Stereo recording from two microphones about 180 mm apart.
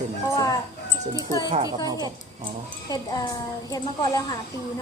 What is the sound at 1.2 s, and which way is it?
Speech, 20° left (ahead or behind).